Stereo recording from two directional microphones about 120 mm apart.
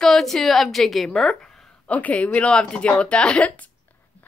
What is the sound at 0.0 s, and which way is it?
A woman's voice, 5° left (ahead or behind).